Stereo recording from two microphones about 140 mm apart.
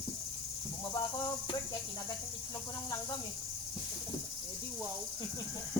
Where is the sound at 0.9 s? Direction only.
30° left (ahead or behind).